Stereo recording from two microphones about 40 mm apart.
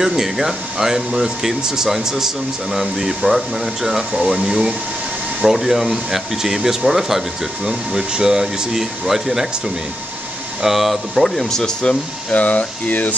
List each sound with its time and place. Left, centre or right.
0.0 s speech: centre
10.6 s speech: centre
11.8 s speech: left
12.4 s speech: left